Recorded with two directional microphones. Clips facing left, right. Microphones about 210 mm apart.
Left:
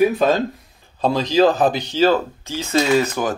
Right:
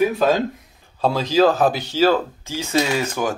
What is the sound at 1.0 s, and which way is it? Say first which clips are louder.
Speech: left 1 dB; 5° right (ahead or behind).